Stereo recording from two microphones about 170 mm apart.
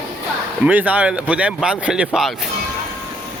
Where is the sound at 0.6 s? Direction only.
10° right (ahead or behind).